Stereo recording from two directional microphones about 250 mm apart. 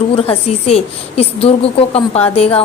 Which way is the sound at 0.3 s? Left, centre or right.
Left.